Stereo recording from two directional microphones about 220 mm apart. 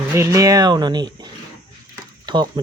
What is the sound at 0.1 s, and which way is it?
Speech, 15° right (ahead or behind).